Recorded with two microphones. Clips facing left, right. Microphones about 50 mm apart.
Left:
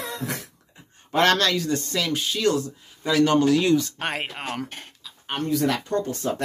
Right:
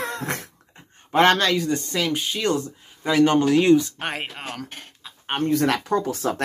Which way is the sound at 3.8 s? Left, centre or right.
Centre.